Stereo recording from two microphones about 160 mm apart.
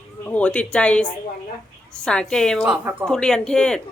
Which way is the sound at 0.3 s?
10° left (ahead or behind).